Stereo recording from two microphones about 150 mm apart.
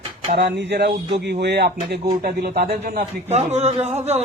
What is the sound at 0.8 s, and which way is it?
Speech, 90° right.